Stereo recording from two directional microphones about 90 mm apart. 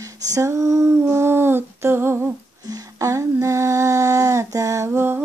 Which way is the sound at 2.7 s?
35° right (ahead or behind).